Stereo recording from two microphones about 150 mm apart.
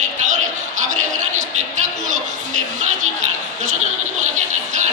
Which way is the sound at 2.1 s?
55° right (ahead or behind).